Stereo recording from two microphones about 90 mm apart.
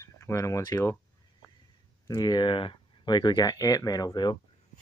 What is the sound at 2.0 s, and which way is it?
Speech, 50° left (ahead or behind).